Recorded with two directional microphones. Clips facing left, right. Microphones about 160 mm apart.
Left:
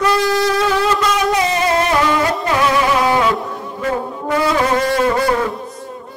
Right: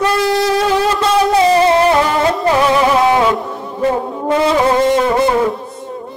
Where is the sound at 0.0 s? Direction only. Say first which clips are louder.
Right 1 dB; 25° right (ahead or behind).